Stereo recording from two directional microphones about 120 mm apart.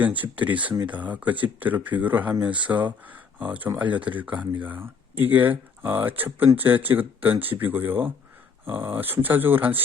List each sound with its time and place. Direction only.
0.2 s speech: 15° right (ahead or behind)